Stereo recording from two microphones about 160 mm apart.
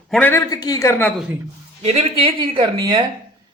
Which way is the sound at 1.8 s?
35° right (ahead or behind).